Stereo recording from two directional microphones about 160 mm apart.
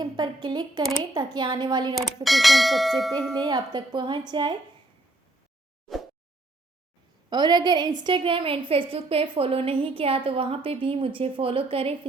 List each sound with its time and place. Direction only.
0.0 s speech: 25° right (ahead or behind)
2.2 s church bell: centre (ahead or behind)
3.3 s speech: 25° right (ahead or behind)
7.3 s a woman's voice: 25° right (ahead or behind)